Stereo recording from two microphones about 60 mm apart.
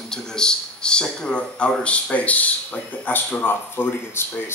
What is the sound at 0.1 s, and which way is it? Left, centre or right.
Speech, centre.